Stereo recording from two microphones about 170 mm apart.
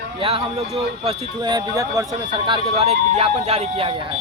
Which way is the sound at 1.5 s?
20° right (ahead or behind).